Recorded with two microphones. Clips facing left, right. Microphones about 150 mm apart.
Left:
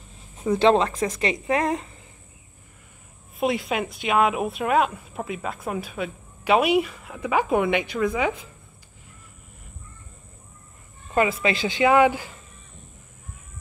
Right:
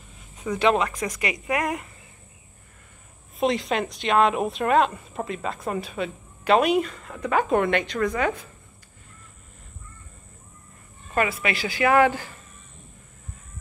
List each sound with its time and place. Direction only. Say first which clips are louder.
0.4 s a woman's voice: left 3 dB; 30° left (ahead or behind)
3.3 s speech: right 1 dB; 5° left (ahead or behind)
11.1 s a woman's voice: left 3 dB; 20° left (ahead or behind)